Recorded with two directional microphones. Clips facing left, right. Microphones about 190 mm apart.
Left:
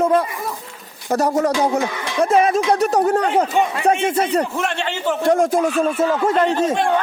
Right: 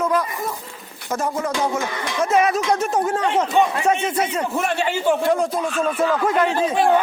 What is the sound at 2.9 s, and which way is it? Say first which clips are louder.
Speech: left 4 dB; 40° left (ahead or behind).